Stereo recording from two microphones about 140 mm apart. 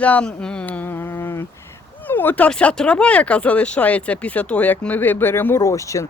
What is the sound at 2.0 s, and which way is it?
Speech, 15° left (ahead or behind).